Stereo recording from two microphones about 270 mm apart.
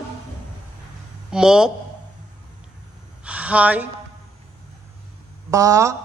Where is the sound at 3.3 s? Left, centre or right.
Centre.